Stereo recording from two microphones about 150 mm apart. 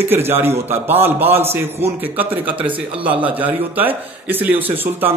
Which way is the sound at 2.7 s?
35° right (ahead or behind).